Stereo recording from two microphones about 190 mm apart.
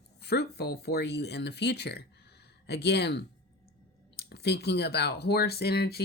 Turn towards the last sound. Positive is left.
turn(degrees=55)  # may be behind; listen again after turning